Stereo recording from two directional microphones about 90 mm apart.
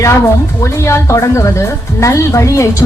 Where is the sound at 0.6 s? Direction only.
35° left (ahead or behind).